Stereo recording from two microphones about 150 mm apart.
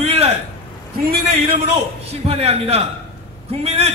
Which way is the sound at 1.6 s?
45° right (ahead or behind).